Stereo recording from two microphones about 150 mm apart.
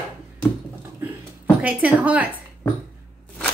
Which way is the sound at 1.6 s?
10° right (ahead or behind).